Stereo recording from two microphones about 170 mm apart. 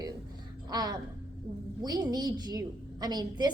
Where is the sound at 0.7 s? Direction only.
25° right (ahead or behind).